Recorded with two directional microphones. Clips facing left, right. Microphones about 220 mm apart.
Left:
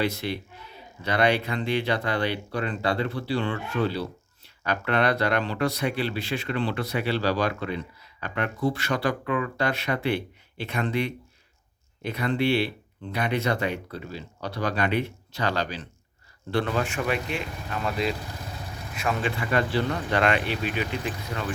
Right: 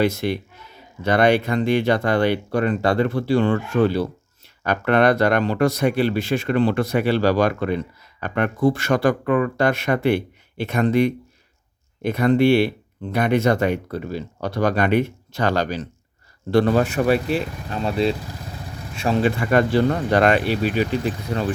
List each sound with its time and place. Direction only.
0.0 s speech: 45° right (ahead or behind); by 19.3 s 30° right (ahead or behind)
19.4 s speech: 50° right (ahead or behind)